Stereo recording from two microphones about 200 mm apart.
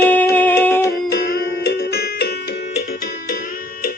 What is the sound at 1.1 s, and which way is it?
Music, 60° left (ahead or behind).